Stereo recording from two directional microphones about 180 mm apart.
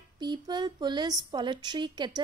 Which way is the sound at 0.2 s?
25° right (ahead or behind).